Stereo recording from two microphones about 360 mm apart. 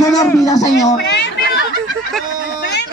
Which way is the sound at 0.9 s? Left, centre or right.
Left.